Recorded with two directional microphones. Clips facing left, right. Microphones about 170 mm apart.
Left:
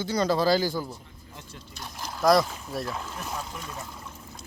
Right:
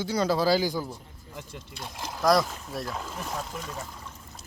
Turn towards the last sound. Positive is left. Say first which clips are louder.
# right 1 dB
turn(degrees=0)  # may be behind; listen again after turning